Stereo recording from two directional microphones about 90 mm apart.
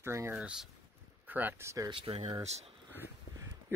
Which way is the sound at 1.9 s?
80° right.